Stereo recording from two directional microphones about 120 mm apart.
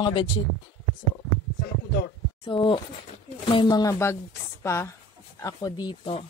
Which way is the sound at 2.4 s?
45° left (ahead or behind).